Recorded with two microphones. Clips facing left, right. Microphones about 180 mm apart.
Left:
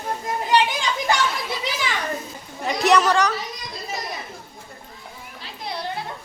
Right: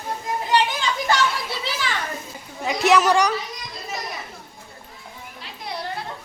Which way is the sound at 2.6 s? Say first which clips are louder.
Even; centre (ahead or behind).